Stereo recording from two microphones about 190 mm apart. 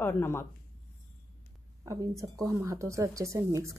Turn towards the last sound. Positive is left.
turn(degrees=-15)  # may be behind; listen again after turning